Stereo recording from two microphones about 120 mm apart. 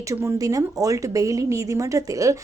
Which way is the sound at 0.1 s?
25° right (ahead or behind).